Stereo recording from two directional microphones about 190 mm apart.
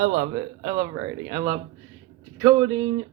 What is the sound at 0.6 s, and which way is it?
Speech, 25° right (ahead or behind).